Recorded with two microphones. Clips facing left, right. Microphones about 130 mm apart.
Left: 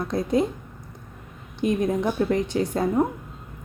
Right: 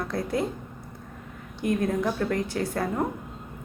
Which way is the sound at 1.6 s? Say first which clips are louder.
Left 3 dB; 20° left (ahead or behind).